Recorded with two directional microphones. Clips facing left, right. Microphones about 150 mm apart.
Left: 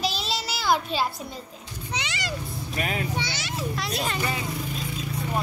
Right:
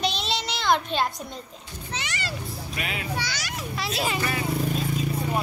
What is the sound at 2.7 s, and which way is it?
Speech, 40° left (ahead or behind).